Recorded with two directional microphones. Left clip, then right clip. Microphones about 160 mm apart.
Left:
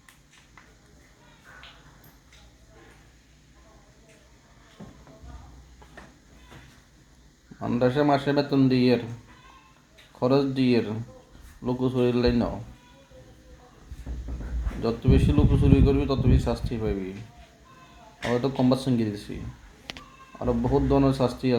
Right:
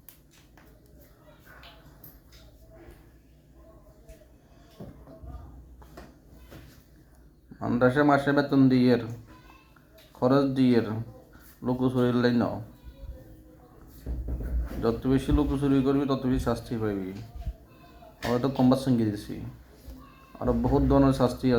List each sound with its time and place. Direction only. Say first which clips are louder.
7.6 s a man's voice: even; 20° left (ahead or behind)
10.2 s a man's voice: even; 20° left (ahead or behind)
14.8 s a man's voice: left 1 dB; 20° left (ahead or behind)
18.2 s speech: left 1 dB; 10° left (ahead or behind)
20.4 s speech: left 1 dB; 15° left (ahead or behind)